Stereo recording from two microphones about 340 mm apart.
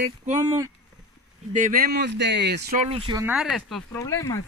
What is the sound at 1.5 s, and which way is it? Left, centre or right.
Speech, right.